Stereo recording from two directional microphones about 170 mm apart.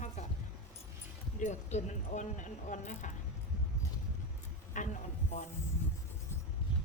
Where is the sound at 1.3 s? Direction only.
45° left (ahead or behind).